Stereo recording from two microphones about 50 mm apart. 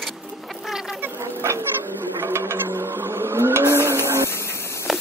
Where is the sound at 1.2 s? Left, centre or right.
Right.